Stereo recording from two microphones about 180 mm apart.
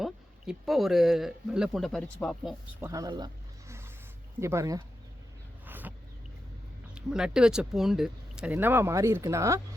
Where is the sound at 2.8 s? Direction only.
20° right (ahead or behind).